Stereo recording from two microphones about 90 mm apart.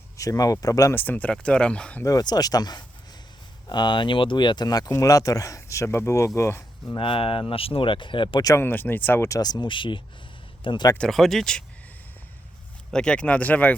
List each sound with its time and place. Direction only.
0.2 s speech: 40° left (ahead or behind)
0.9 s speech: 20° left (ahead or behind)
2.0 s speech: 45° left (ahead or behind)
7.0 s speech: 90° left; by 8.4 s 65° left (ahead or behind)
8.5 s speech: 20° left (ahead or behind)
9.3 s speech: 45° left (ahead or behind); by 10.8 s 65° left (ahead or behind)
10.9 s speech: 5° left (ahead or behind)
12.9 s speech: 10° left (ahead or behind)